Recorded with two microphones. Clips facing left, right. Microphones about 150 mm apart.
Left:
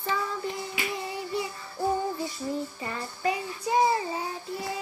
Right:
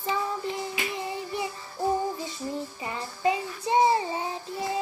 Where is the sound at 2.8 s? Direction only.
20° right (ahead or behind).